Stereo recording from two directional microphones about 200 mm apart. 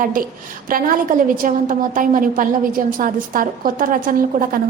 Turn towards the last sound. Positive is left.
turn(degrees=-45)  # may be behind; listen again after turning